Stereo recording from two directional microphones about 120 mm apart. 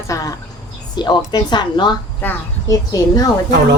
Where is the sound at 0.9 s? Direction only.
35° left (ahead or behind).